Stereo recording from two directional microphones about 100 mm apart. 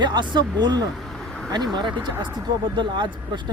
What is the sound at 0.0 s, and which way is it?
Speech, 50° right (ahead or behind).